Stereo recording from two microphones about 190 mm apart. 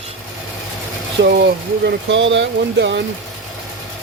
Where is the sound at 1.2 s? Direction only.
65° right (ahead or behind).